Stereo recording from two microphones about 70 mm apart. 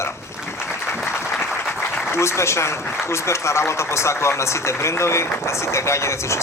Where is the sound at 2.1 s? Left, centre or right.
Left.